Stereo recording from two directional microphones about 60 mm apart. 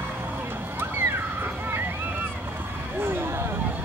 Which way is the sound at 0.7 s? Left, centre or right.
Right.